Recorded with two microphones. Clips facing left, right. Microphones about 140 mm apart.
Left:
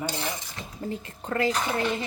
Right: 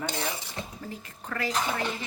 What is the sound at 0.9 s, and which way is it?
Speech, 25° left (ahead or behind).